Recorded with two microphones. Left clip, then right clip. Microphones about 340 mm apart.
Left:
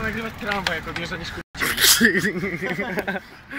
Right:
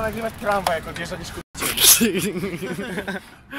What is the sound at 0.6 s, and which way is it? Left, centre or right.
Speech, centre.